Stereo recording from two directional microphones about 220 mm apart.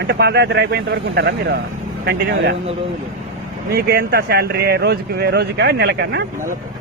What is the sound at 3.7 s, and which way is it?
Speech, 45° right (ahead or behind).